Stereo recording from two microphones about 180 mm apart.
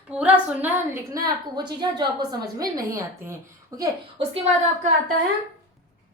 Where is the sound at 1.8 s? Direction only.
20° right (ahead or behind).